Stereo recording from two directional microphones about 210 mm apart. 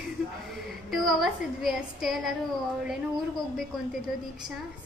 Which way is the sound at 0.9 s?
Centre (ahead or behind).